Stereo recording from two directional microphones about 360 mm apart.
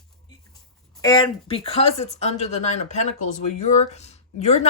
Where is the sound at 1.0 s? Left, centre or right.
Centre.